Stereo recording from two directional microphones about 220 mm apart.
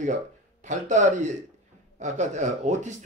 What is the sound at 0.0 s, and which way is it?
Speech, 35° right (ahead or behind).